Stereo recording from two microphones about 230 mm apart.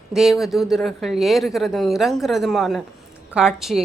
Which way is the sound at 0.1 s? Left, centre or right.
Centre.